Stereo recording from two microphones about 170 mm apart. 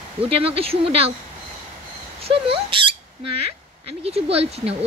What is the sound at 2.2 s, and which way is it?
Speech, 30° right (ahead or behind).